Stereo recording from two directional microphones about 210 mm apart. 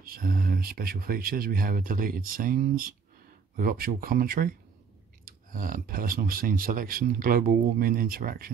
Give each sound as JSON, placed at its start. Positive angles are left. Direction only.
{"t": 0.0, "sound": "speech", "side_deg": -45}